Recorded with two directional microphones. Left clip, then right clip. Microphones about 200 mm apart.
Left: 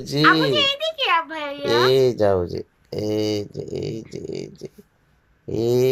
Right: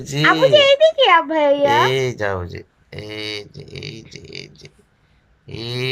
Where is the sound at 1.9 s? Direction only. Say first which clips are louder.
Left 4 dB; 20° left (ahead or behind); by 4.7 s 35° left (ahead or behind).